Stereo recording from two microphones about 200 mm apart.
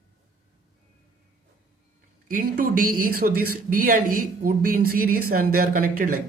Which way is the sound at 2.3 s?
45° right (ahead or behind).